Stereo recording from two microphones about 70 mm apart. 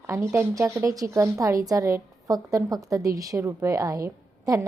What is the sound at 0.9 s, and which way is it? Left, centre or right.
A woman's voice, right.